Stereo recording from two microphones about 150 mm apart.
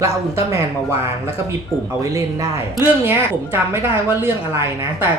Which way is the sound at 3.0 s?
15° right (ahead or behind).